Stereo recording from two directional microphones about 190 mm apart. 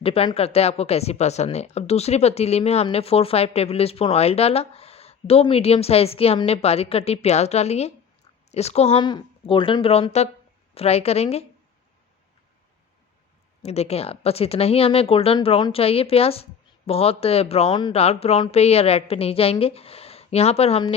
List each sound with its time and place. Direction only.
0.0 s speech: 30° left (ahead or behind)
13.6 s speech: 35° left (ahead or behind)